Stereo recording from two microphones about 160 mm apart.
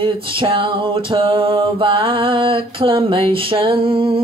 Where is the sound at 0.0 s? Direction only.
35° right (ahead or behind).